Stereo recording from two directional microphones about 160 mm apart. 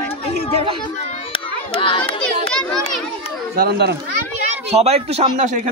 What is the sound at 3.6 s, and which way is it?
Speech, 90° right.